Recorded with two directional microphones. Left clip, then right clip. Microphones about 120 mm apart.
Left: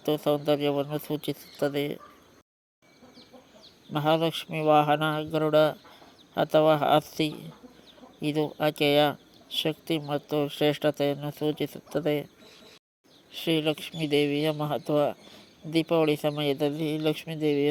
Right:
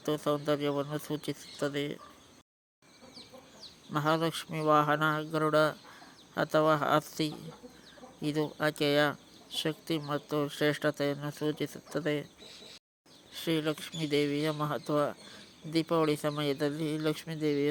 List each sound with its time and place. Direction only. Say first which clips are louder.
0.0 s speech: left 5 dB; 20° left (ahead or behind)
3.6 s speech: left 3 dB; 20° left (ahead or behind)
13.3 s speech: left 5 dB; 15° left (ahead or behind)